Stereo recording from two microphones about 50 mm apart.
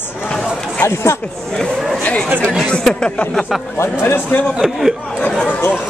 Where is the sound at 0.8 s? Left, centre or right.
Left.